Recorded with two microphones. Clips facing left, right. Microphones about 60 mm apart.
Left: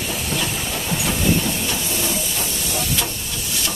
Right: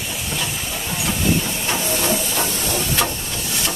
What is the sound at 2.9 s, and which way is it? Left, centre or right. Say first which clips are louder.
Hiss: right 4 dB; right.